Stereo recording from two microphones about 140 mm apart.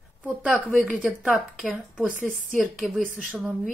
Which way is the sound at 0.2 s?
5° right (ahead or behind).